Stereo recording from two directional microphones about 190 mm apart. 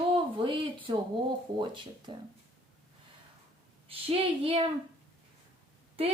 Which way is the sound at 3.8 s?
30° right (ahead or behind).